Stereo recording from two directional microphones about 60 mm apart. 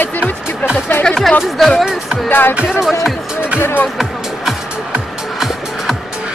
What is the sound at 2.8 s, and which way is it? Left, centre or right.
Speech, centre.